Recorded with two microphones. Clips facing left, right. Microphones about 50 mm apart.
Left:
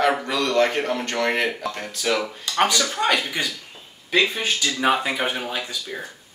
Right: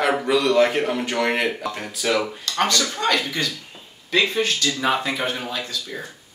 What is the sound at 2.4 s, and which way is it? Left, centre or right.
Speech, centre.